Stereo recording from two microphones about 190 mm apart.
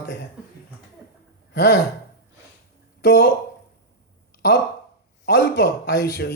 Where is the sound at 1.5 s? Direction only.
65° left (ahead or behind).